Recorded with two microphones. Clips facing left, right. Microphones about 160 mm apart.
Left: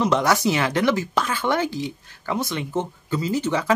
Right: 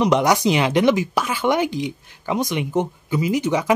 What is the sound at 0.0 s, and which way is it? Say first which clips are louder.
Speech: right 3 dB; 15° right (ahead or behind).